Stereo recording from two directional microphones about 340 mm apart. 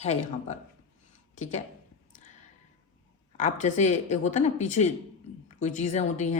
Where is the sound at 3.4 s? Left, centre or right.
Left.